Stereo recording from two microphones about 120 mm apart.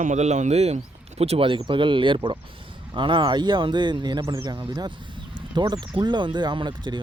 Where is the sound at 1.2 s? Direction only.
50° right (ahead or behind).